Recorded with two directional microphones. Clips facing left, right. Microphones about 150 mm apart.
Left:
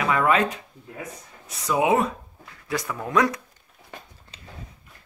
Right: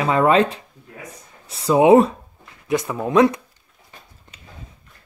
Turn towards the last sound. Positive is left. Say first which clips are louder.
# right 1 dB
turn(degrees=-20)  # may be behind; listen again after turning